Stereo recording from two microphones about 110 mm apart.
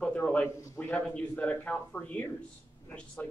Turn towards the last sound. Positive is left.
turn(degrees=10)  # may be behind; listen again after turning